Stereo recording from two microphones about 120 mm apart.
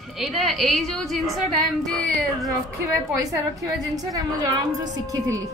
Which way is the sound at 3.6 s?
30° right (ahead or behind).